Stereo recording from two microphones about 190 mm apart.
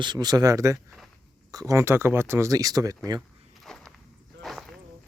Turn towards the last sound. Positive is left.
turn(degrees=0)  # may be behind; listen again after turning